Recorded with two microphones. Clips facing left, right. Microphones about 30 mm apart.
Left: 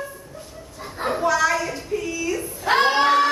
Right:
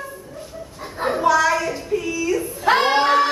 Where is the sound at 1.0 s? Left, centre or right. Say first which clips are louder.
Right 3 dB; centre.